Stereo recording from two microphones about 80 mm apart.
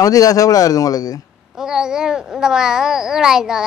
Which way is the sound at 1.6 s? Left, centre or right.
Centre.